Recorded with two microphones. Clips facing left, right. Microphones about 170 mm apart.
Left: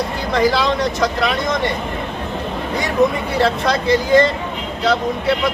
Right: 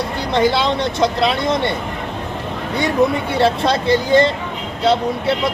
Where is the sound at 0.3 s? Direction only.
25° right (ahead or behind).